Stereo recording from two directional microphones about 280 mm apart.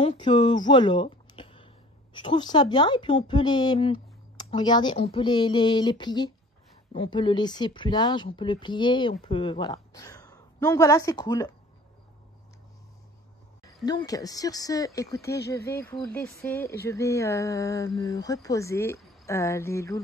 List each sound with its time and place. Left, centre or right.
0.0 s a woman's voice: centre
13.8 s a woman's voice: centre